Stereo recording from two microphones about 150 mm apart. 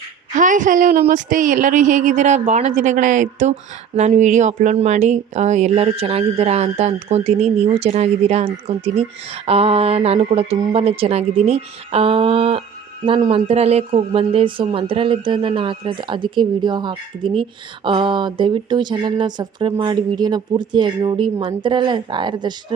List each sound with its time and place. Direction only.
0.3 s speech: 60° right (ahead or behind); by 22.5 s 30° right (ahead or behind)